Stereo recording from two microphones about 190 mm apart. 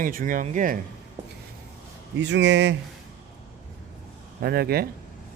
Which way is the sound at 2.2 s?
70° right (ahead or behind).